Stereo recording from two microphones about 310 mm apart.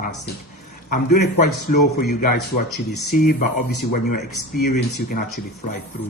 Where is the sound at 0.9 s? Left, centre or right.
Left.